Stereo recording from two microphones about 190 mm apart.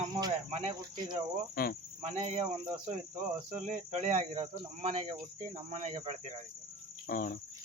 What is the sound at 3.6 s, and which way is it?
Speech, 40° right (ahead or behind).